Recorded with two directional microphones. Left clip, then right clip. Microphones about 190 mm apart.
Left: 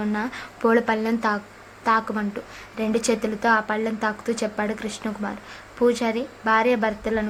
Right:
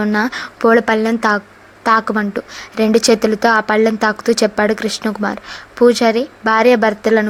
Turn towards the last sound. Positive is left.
turn(degrees=-35)  # may be behind; listen again after turning